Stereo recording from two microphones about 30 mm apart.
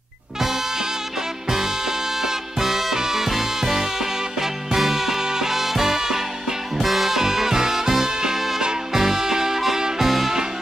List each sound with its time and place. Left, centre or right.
0.4 s music: centre
6.8 s music: centre
7.1 s music: centre
9.8 s music: right
10.0 s music: centre